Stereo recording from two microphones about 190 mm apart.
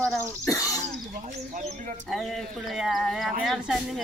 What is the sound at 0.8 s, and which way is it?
Speech, 40° right (ahead or behind).